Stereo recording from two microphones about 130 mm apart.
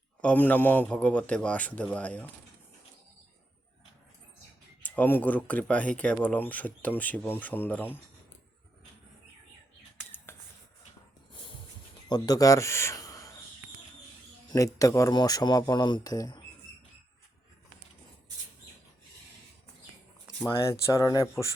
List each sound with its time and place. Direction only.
0.2 s a man's voice: 10° left (ahead or behind)
4.8 s a man's voice: 15° left (ahead or behind)
11.3 s snort: 40° left (ahead or behind)
12.0 s speech: 30° left (ahead or behind)
14.5 s speech: 25° left (ahead or behind)
20.6 s speech: 20° left (ahead or behind)